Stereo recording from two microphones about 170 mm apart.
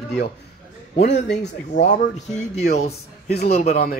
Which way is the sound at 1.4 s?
45° left (ahead or behind).